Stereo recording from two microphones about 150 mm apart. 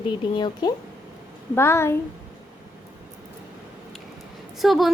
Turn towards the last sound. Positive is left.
turn(degrees=0)  # may be behind; listen again after turning